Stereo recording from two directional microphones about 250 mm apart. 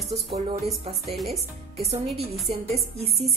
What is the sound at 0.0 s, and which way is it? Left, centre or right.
Speech, centre.